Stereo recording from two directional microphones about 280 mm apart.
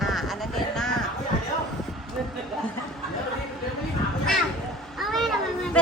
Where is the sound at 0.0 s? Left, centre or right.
Centre.